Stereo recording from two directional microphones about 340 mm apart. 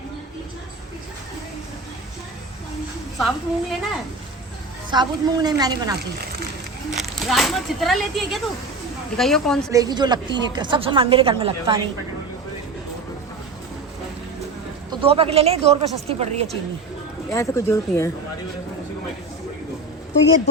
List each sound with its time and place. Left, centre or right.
3.2 s speech: centre
4.9 s a woman's voice: centre
6.9 s speech: centre
9.7 s a woman's voice: centre
14.8 s a woman's voice: centre
17.3 s speech: centre